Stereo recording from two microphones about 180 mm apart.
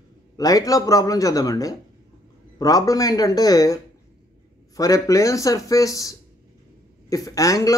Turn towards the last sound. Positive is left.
turn(degrees=20)  # may be behind; listen again after turning